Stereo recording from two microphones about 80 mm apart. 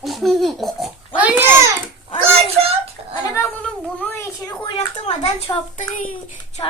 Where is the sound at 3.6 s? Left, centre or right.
Left.